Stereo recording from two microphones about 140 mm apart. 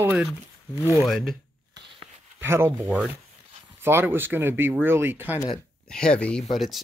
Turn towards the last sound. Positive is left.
turn(degrees=0)  # may be behind; listen again after turning